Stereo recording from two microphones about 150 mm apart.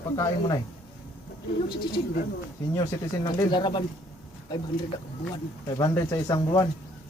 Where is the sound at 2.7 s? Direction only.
20° left (ahead or behind).